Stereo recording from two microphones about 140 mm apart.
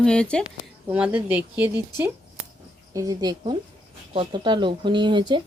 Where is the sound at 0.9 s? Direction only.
10° right (ahead or behind).